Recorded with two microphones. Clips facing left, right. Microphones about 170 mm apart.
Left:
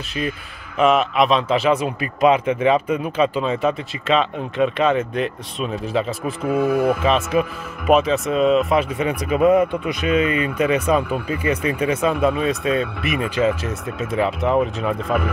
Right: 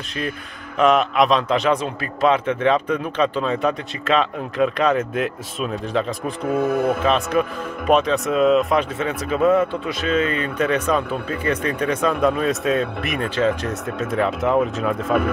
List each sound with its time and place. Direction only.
0.7 s a man's voice: centre (ahead or behind)
8.9 s speech: 10° left (ahead or behind)